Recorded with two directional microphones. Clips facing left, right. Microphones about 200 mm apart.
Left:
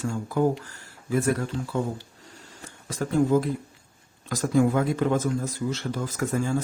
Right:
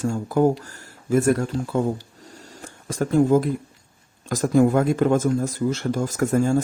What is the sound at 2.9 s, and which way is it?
Speech, 50° right (ahead or behind).